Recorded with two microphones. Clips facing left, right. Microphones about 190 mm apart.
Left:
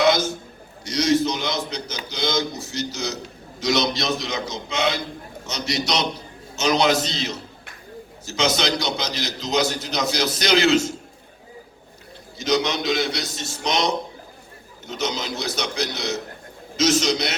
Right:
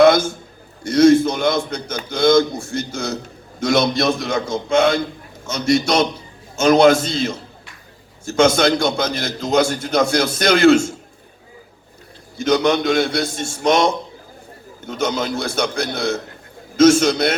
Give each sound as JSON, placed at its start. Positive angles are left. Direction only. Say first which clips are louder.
{"t": 0.0, "sound": "a sound", "louder": "right 7 dB", "side_deg": -55}
{"t": 0.9, "sound": "a man's voice", "louder": "right 8 dB", "side_deg": -55}
{"t": 12.4, "sound": "a man's voice", "louder": "right 6 dB", "side_deg": -55}